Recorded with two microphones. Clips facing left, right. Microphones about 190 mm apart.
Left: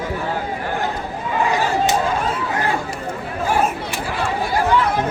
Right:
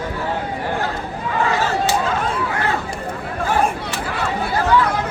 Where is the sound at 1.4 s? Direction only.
15° left (ahead or behind).